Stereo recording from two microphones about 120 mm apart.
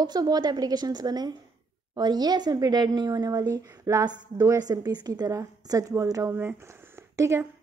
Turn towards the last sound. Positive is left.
turn(degrees=-25)  # may be behind; listen again after turning